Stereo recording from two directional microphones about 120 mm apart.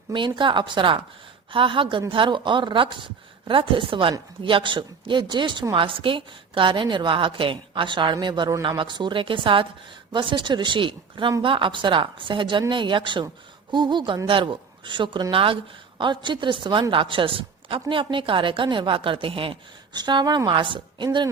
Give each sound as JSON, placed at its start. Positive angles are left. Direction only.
{"t": 0.1, "sound": "a woman's voice", "side_deg": -40}
{"t": 19.9, "sound": "a woman's voice", "side_deg": -35}